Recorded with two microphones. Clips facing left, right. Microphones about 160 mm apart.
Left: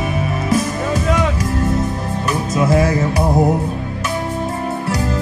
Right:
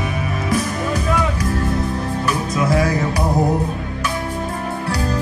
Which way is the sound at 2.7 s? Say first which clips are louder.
Left 3 dB; 25° left (ahead or behind).